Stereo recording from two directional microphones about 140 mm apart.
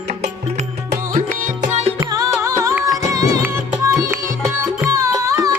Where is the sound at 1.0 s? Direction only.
75° right (ahead or behind).